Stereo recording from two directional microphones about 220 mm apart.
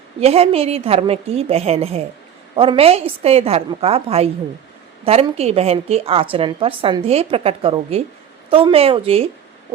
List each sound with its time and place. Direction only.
0.2 s a woman's voice: 25° right (ahead or behind)